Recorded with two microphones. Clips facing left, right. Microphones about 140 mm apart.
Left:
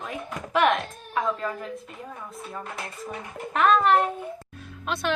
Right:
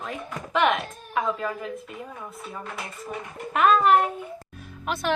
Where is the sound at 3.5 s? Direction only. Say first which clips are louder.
Right 1 dB; 5° right (ahead or behind).